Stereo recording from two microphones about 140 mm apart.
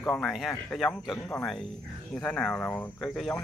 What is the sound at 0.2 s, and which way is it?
Speech, centre (ahead or behind).